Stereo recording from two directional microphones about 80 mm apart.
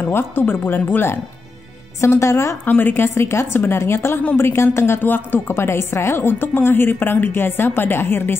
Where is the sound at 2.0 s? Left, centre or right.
Left.